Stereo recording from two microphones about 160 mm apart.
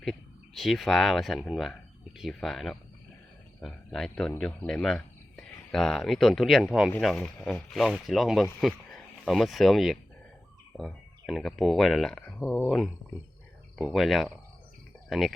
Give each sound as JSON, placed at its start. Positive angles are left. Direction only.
{"t": 0.0, "sound": "a man's voice", "side_deg": 0}